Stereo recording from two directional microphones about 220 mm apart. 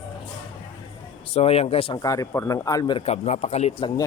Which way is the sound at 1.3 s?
25° left (ahead or behind).